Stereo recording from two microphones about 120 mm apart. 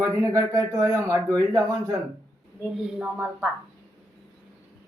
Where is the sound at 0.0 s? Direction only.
30° right (ahead or behind).